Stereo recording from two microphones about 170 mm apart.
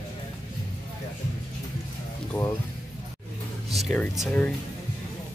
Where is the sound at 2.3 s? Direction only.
20° left (ahead or behind).